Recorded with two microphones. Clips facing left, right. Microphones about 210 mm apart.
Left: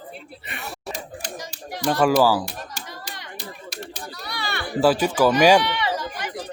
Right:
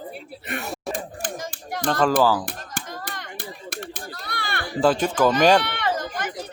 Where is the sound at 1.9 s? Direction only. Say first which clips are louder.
Left 2 dB; 10° left (ahead or behind).